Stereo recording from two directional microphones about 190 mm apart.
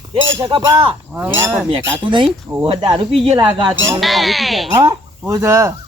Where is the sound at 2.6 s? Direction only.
30° right (ahead or behind).